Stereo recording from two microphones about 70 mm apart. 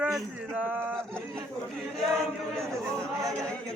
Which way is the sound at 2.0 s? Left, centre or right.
Centre.